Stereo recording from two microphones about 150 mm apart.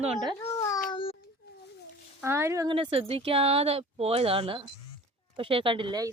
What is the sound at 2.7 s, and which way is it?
Speech, 40° right (ahead or behind).